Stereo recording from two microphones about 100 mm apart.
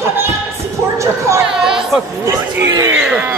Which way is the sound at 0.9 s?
30° right (ahead or behind).